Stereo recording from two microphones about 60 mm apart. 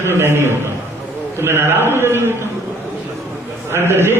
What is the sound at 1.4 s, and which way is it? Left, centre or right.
Speech, right.